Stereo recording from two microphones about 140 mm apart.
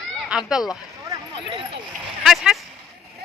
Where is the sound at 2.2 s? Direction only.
Centre (ahead or behind).